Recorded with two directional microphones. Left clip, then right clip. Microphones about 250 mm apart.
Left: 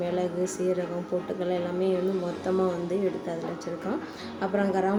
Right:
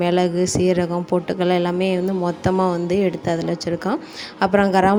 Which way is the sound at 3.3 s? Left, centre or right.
Right.